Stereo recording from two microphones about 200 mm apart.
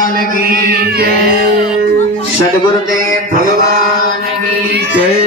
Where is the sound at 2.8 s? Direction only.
40° right (ahead or behind).